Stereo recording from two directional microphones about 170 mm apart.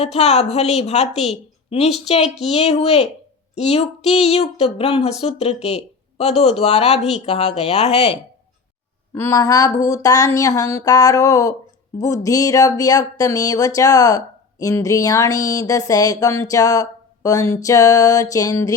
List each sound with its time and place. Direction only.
0.0 s speech: 40° left (ahead or behind)
9.1 s speech: 15° left (ahead or behind)